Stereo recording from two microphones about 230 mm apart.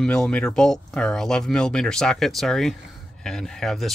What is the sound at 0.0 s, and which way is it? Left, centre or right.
Speech, centre.